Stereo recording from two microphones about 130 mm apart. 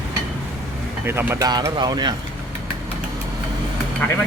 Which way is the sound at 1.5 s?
35° right (ahead or behind).